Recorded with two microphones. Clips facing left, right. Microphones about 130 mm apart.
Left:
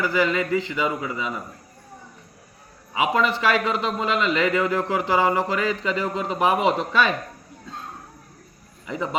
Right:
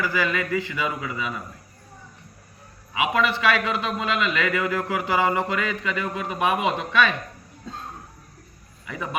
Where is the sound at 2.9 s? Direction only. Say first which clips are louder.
Left 1 dB; 30° left (ahead or behind).